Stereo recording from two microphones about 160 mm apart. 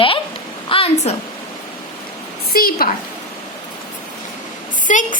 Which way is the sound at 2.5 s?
70° left (ahead or behind).